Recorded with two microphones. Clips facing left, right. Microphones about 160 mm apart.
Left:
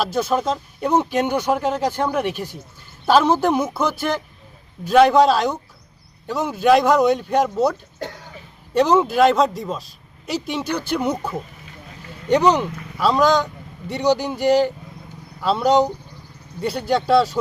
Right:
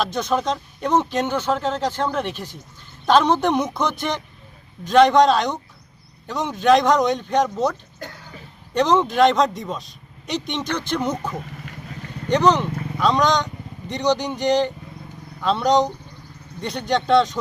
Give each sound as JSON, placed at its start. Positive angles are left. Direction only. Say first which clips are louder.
{"t": 0.0, "sound": "a woman's voice", "louder": "left 2 dB", "side_deg": 5}